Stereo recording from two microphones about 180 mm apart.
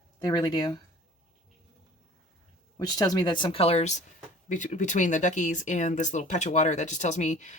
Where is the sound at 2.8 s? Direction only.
20° left (ahead or behind); by 7.5 s 40° left (ahead or behind).